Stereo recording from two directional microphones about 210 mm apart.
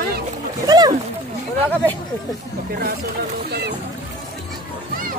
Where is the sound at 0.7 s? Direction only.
20° right (ahead or behind).